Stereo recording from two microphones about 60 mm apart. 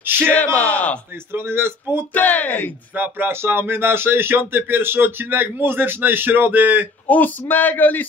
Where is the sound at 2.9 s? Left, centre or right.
Right.